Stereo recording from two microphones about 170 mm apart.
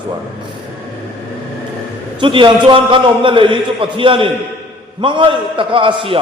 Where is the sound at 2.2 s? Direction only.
30° right (ahead or behind).